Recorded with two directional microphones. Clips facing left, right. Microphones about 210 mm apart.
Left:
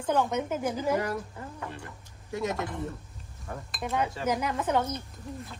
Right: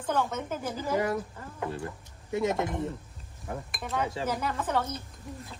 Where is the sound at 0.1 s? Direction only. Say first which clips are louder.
Left 3 dB; 15° left (ahead or behind).